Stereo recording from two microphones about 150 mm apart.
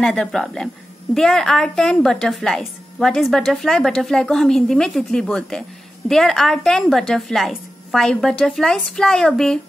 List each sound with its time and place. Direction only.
0.0 s a woman's voice: 5° left (ahead or behind)